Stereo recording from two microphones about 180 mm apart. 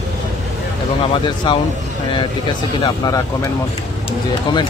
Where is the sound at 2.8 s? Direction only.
20° left (ahead or behind).